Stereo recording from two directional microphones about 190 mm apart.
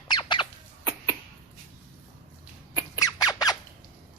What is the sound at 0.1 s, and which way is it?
Squeak, 25° left (ahead or behind).